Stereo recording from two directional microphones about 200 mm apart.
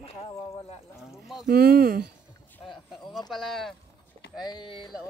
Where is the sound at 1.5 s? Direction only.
50° right (ahead or behind).